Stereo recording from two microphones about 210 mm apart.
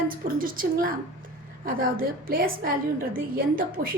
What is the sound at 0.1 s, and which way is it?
A woman's voice, 40° right (ahead or behind).